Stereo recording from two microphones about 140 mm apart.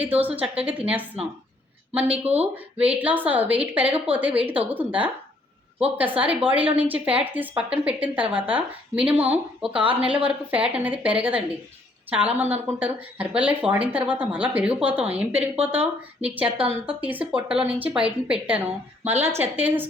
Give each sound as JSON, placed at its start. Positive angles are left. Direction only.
{"t": 0.0, "sound": "speech", "side_deg": -10}
{"t": 2.2, "sound": "speech", "side_deg": -50}
{"t": 2.7, "sound": "speech", "side_deg": -10}